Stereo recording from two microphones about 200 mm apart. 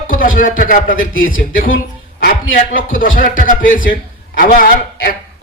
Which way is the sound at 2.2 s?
45° left (ahead or behind).